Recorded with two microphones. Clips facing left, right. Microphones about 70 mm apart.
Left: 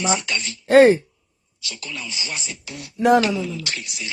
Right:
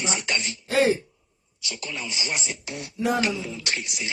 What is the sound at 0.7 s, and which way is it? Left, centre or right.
Speech, left.